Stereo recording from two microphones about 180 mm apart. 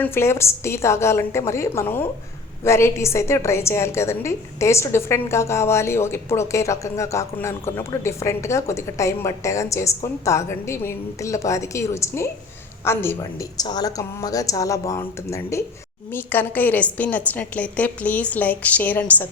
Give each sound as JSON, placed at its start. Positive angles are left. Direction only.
{"t": 0.0, "sound": "a woman's voice", "side_deg": 15}